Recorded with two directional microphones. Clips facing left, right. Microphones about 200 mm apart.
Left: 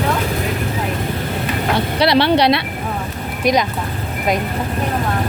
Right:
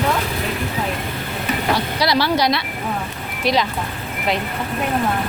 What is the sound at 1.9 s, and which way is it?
Speech, 60° left (ahead or behind).